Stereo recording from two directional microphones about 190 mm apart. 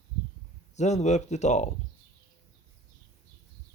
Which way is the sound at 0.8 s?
35° left (ahead or behind).